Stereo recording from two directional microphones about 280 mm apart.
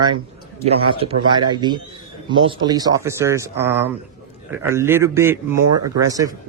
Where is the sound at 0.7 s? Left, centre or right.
Right.